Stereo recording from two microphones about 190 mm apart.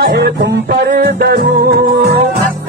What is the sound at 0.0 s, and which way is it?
Music, 60° right (ahead or behind).